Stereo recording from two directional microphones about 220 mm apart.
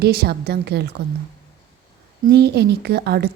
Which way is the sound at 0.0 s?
45° right (ahead or behind).